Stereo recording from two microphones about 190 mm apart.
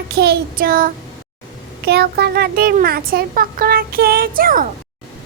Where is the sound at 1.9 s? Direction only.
60° right (ahead or behind).